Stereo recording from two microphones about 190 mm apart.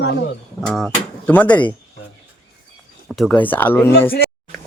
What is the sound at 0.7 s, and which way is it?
Speech, 5° left (ahead or behind).